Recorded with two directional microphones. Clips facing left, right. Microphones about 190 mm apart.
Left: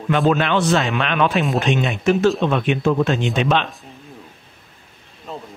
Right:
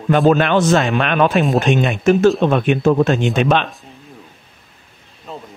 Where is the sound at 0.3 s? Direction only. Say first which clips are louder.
Right 4 dB; 45° right (ahead or behind).